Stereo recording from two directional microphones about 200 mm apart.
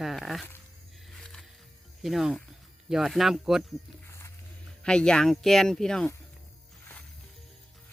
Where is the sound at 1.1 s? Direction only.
Centre (ahead or behind).